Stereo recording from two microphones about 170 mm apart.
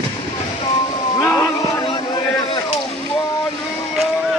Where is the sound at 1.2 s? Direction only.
15° left (ahead or behind).